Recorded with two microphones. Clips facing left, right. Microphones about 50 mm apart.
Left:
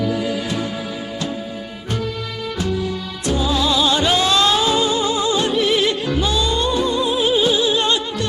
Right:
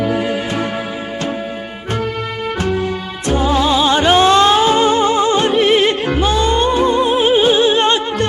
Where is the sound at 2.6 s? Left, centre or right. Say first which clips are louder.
Right 3 dB; right.